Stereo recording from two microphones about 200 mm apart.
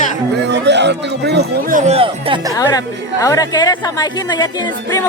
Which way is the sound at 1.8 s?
30° right (ahead or behind).